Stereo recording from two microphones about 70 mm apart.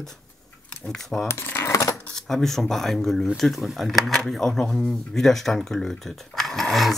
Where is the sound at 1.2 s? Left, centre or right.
Left.